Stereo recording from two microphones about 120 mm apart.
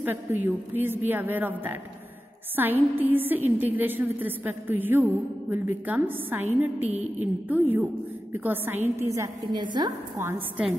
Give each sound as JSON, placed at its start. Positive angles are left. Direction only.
{"t": 0.0, "sound": "a woman's voice", "side_deg": -15}
{"t": 6.9, "sound": "a sound", "side_deg": -65}
{"t": 7.4, "sound": "a woman's voice", "side_deg": -15}
{"t": 9.5, "sound": "a woman's voice", "side_deg": -40}